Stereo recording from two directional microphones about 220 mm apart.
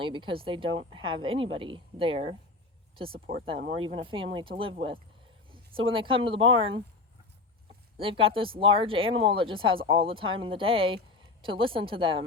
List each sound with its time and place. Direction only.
0.0 s speech: 25° right (ahead or behind)
3.1 s speech: 40° right (ahead or behind)
3.4 s speech: 25° right (ahead or behind)
7.9 s speech: 25° right (ahead or behind)